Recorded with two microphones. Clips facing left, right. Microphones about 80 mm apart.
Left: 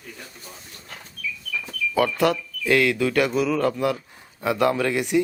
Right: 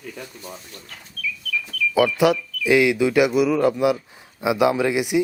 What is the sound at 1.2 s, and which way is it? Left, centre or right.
Bird, centre.